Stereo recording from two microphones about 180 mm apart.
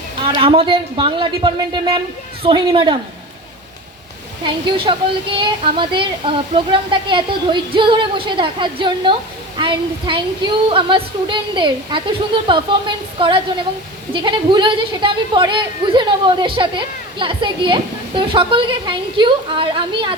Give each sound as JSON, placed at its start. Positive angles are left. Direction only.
{"t": 0.3, "sound": "a woman's voice", "side_deg": -30}
{"t": 4.4, "sound": "a woman's voice", "side_deg": -30}